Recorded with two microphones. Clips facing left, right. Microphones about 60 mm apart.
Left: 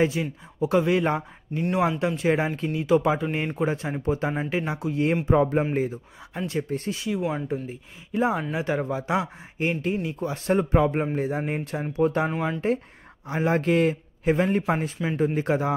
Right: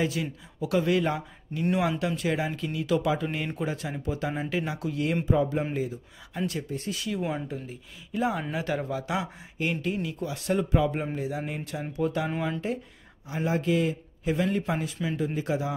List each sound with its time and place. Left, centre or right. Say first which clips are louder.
0.0 s speech: left 5 dB; left
5.2 s a man's voice: left 4 dB; left
6.3 s speech: left 3 dB; left
7.2 s speech: left 3 dB; centre
7.6 s a man's voice: left 4 dB; left
12.3 s speech: left 3 dB; centre
13.3 s a man's voice: left 4 dB; left
14.3 s a man's voice: left 4 dB; left